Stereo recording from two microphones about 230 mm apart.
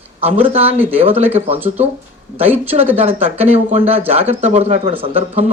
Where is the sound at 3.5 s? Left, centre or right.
Right.